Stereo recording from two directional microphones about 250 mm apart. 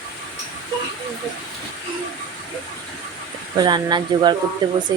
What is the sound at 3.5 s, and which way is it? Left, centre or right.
Speech, centre.